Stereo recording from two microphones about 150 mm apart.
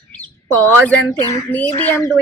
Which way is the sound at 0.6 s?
10° left (ahead or behind).